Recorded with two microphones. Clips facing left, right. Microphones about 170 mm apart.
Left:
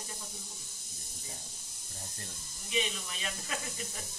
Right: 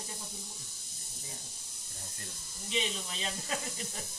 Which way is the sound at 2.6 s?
25° right (ahead or behind).